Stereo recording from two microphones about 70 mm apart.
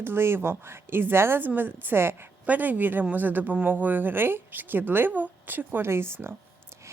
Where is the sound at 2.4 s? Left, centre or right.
Right.